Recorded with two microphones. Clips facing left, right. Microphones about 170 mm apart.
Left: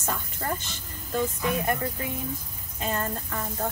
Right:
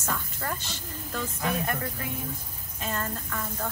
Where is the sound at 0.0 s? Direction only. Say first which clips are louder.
Left 1 dB; 15° left (ahead or behind).